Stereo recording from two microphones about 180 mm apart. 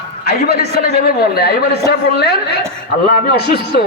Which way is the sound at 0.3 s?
60° left (ahead or behind).